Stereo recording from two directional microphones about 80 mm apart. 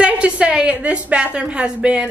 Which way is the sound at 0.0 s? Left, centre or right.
Centre.